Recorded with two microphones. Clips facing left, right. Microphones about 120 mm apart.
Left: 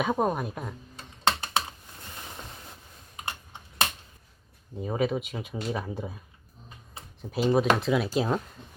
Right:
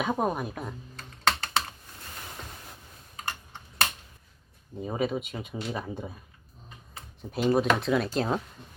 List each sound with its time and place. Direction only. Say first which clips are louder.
0.0 s speech: left 2 dB; centre (ahead or behind)
0.9 s computer keyboard: even; 15° left (ahead or behind)
4.8 s speech: left 2 dB; centre (ahead or behind)
7.2 s speech: left 1 dB; centre (ahead or behind)
8.6 s speech: left 1 dB; 20° left (ahead or behind)